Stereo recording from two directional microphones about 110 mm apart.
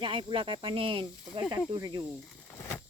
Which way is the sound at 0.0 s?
50° right (ahead or behind).